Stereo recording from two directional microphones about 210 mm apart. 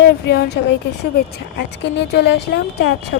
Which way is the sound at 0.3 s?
50° left (ahead or behind).